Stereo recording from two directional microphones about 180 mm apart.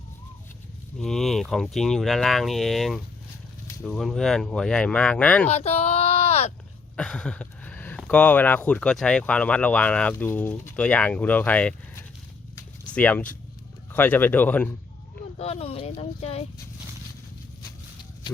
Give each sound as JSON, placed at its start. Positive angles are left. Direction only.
{"t": 0.9, "sound": "speech", "side_deg": 0}
{"t": 5.5, "sound": "a sound", "side_deg": 35}
{"t": 6.9, "sound": "speech", "side_deg": 5}
{"t": 15.4, "sound": "speech", "side_deg": 35}